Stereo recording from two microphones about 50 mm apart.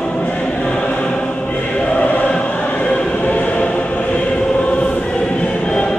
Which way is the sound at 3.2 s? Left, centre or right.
Left.